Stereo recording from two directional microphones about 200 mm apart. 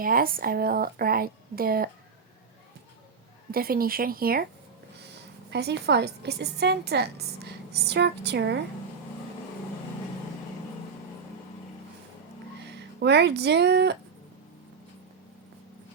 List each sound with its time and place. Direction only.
0.0 s speech: 45° right (ahead or behind)
3.5 s speech: 45° right (ahead or behind)
5.5 s a woman's voice: 55° right (ahead or behind)
13.0 s a woman's voice: 55° right (ahead or behind)